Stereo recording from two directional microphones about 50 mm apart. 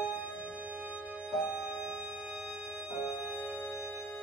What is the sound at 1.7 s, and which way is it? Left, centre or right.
Organ, right.